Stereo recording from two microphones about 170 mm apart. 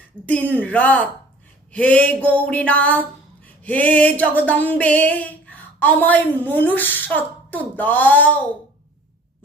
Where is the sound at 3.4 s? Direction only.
10° left (ahead or behind).